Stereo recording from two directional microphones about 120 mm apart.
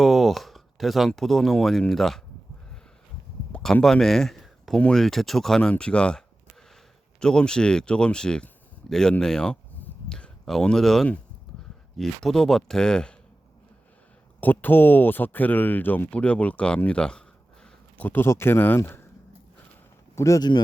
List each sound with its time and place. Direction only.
0.0 s speech: centre (ahead or behind)
3.5 s speech: 5° left (ahead or behind)
14.4 s speech: 15° left (ahead or behind)
20.1 s speech: 25° left (ahead or behind)